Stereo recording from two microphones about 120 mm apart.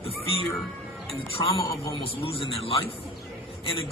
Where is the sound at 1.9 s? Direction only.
50° left (ahead or behind).